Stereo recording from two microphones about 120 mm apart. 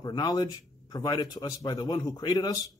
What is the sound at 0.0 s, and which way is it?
A man's voice, 30° left (ahead or behind).